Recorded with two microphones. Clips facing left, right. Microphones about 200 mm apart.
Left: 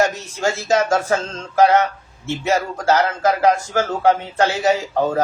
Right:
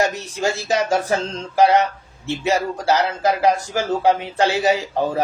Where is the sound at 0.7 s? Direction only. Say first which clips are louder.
Left 3 dB; 15° right (ahead or behind).